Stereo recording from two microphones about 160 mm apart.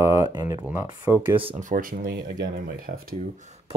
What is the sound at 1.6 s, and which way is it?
Speech, 60° right (ahead or behind).